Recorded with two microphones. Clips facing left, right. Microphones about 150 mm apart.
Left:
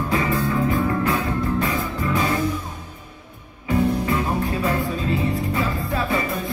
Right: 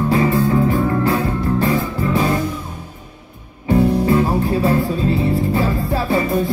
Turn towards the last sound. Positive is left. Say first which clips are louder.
# right 5 dB
turn(degrees=-30)  # may be behind; listen again after turning